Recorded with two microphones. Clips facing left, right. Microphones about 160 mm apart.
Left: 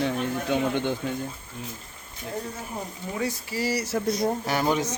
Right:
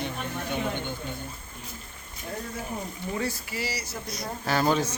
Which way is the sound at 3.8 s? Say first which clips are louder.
Left 11 dB; 85° left.